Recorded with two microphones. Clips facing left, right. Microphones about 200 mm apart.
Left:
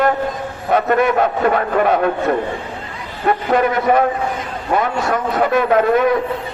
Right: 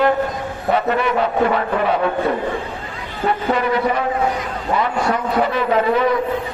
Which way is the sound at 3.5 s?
50° left (ahead or behind).